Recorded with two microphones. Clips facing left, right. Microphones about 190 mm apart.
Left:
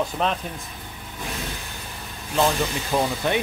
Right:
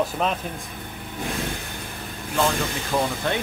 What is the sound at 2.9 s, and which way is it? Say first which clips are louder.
Speech: left 1 dB; 15° left (ahead or behind).